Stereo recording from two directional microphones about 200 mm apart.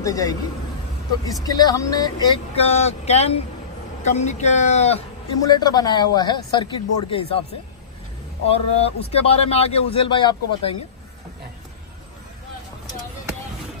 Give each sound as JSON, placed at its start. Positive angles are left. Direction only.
{"t": 0.0, "sound": "a man's voice", "side_deg": 15}
{"t": 1.4, "sound": "a man's voice", "side_deg": 20}
{"t": 5.4, "sound": "a man's voice", "side_deg": 20}
{"t": 8.5, "sound": "a man's voice", "side_deg": 30}